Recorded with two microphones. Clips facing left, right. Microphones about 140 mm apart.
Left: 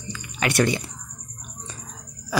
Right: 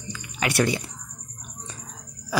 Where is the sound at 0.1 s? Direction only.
5° right (ahead or behind).